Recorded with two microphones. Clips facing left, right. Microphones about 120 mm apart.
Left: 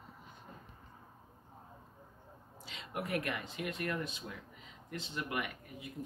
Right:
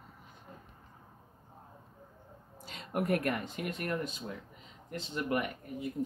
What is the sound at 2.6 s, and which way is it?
Speech, 45° right (ahead or behind).